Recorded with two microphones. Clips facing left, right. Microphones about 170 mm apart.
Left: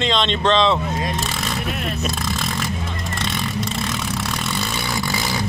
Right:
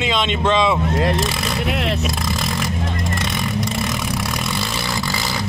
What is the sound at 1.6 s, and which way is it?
Vehicle, 90° right.